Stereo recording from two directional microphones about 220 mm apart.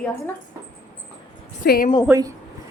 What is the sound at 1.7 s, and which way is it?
Speech, 40° left (ahead or behind).